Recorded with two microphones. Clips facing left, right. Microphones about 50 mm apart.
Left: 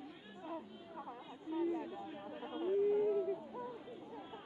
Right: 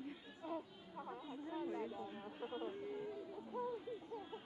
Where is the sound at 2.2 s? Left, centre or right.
Centre.